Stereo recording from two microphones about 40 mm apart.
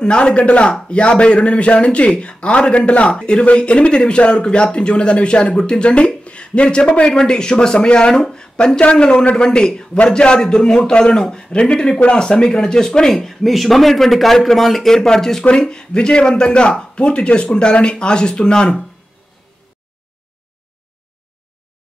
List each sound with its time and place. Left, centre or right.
0.0 s a man's voice: left
13.1 s a man's voice: centre; by 18.8 s left